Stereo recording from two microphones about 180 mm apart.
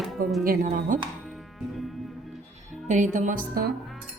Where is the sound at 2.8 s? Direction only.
45° right (ahead or behind).